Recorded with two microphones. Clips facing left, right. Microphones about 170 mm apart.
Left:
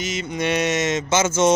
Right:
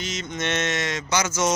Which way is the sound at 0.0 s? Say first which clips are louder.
Left 5 dB; 5° left (ahead or behind).